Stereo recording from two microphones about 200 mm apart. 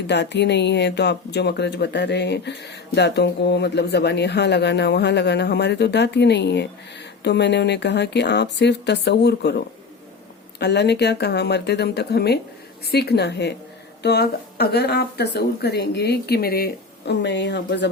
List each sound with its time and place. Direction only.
0.1 s speech: 60° left (ahead or behind)